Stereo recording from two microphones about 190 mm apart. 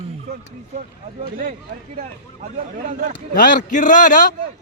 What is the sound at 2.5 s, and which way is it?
Speech, 40° right (ahead or behind).